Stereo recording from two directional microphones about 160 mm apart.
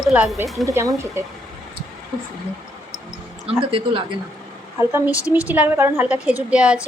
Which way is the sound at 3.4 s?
35° right (ahead or behind).